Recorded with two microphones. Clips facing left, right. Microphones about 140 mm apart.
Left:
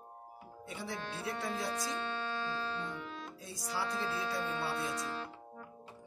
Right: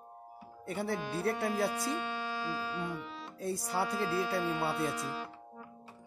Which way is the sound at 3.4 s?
55° right (ahead or behind).